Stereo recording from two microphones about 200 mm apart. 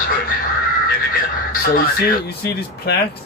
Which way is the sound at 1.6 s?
45° left (ahead or behind).